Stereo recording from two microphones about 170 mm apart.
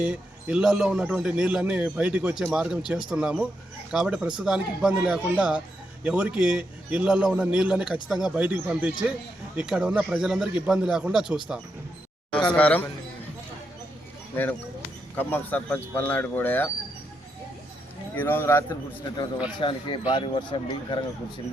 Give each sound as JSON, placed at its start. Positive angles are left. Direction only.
{"t": 0.0, "sound": "speech", "side_deg": -5}
{"t": 12.5, "sound": "speech", "side_deg": 10}
{"t": 15.1, "sound": "speech", "side_deg": 10}
{"t": 18.1, "sound": "speech", "side_deg": 10}